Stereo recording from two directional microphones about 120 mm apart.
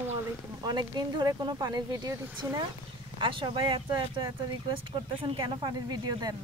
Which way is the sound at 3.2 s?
45° right (ahead or behind).